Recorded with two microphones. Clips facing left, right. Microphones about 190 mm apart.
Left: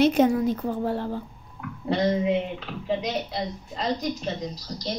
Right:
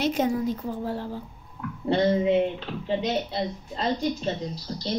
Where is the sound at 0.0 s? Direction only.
55° left (ahead or behind).